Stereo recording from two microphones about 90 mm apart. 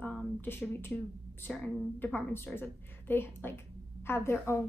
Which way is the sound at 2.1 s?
25° left (ahead or behind).